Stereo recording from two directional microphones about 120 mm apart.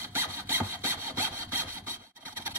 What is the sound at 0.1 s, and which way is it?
Sawing, 20° right (ahead or behind).